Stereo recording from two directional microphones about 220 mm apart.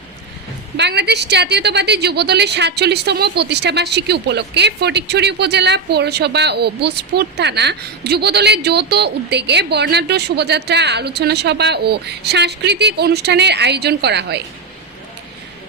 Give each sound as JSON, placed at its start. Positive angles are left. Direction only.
{"t": 0.8, "sound": "a woman's voice", "side_deg": -50}